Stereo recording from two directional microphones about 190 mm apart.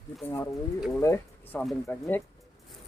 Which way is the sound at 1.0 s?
15° left (ahead or behind).